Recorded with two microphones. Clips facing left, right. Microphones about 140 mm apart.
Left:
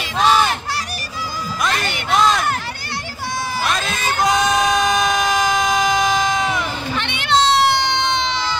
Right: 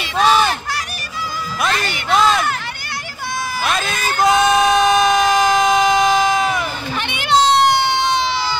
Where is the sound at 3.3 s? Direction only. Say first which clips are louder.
Even; 30° left (ahead or behind).